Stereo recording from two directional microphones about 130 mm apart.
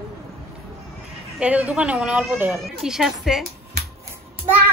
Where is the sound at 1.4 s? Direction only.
10° right (ahead or behind).